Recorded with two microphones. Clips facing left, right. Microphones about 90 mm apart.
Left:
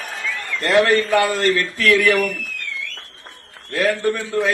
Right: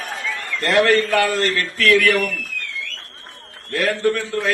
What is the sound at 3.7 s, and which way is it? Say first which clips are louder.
Speech: even; 20° left (ahead or behind).